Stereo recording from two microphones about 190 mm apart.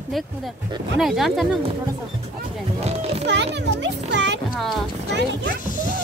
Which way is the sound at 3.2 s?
65° right (ahead or behind).